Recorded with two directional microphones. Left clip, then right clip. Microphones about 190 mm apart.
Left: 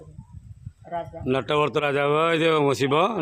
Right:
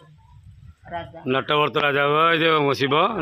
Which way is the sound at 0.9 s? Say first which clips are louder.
Left 1 dB; 40° left (ahead or behind).